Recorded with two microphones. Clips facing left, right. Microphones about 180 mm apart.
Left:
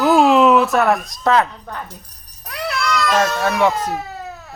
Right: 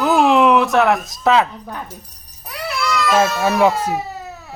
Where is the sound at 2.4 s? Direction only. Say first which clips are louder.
Even; 5° right (ahead or behind).